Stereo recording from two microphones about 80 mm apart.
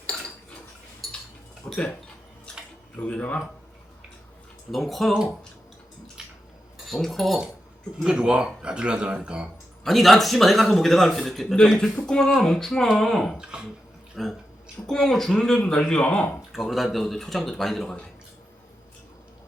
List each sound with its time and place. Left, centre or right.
1.0 s a sound: centre
1.7 s speech: centre
4.7 s a man's voice: centre
6.8 s a man's voice: centre
9.8 s a man's voice: centre
13.3 s speech: centre
14.2 s a man's voice: centre
16.5 s a man's voice: centre